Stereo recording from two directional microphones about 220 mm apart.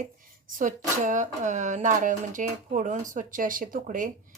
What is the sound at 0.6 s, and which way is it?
Speech, 35° right (ahead or behind).